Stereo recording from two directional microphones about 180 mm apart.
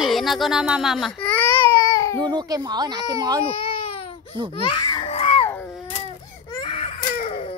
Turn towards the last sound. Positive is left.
turn(degrees=40)  # may be behind; listen again after turning